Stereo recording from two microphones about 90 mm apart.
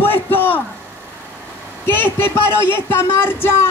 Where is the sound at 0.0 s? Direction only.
25° left (ahead or behind).